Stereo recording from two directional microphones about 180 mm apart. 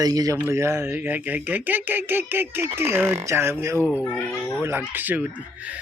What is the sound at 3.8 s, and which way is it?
Speech, 10° left (ahead or behind).